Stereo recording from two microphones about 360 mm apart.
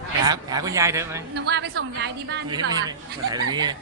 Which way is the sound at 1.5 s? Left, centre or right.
Right.